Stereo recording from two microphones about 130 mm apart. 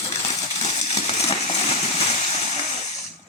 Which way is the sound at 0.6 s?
55° left (ahead or behind).